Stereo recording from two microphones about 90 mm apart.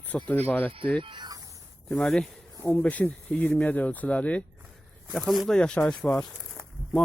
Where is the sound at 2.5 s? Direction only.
30° left (ahead or behind).